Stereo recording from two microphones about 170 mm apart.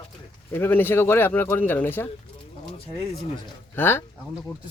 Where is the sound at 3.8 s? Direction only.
15° left (ahead or behind).